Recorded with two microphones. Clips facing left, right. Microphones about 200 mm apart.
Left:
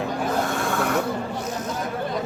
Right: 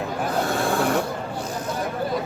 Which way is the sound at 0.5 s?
30° right (ahead or behind).